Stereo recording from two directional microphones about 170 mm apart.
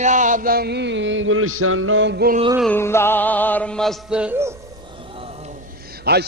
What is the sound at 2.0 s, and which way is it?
Music, 90° right.